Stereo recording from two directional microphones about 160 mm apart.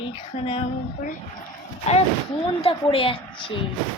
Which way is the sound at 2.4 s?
35° left (ahead or behind).